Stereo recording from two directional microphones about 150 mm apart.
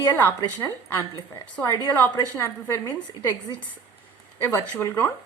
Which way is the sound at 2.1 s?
20° left (ahead or behind).